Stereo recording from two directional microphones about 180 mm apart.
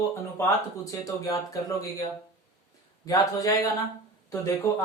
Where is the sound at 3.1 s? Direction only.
20° left (ahead or behind).